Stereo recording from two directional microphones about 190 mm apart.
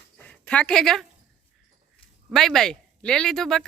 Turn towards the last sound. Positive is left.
turn(degrees=0)  # may be behind; listen again after turning